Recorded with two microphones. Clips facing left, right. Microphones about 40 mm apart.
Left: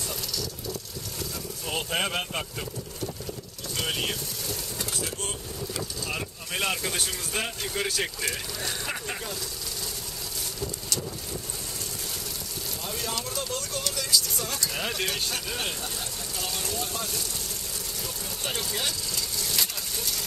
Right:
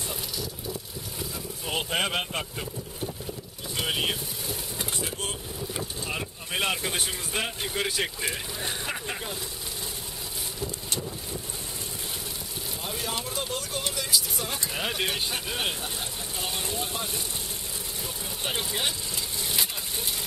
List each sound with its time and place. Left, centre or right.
1.9 s speech: centre
3.7 s vehicle: centre
5.8 s speech: centre
12.8 s speech: centre
18.4 s vehicle: centre